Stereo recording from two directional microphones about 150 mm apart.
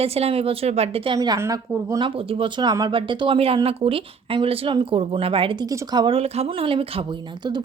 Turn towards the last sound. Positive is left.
turn(degrees=-30)  # may be behind; listen again after turning